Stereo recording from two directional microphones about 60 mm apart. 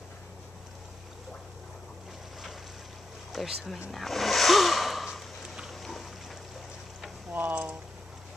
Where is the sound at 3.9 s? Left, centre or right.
Centre.